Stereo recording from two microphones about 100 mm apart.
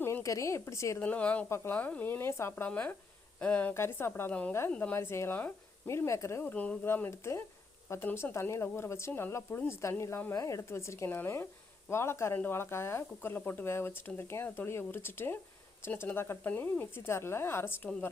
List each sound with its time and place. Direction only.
0.0 s a woman's voice: 30° left (ahead or behind)
0.9 s speech: 15° left (ahead or behind)
1.5 s speech: 25° left (ahead or behind)
6.4 s speech: 15° left (ahead or behind)